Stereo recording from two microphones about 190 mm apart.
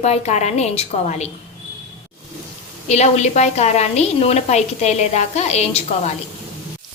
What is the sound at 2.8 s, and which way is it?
A woman's voice, 35° left (ahead or behind).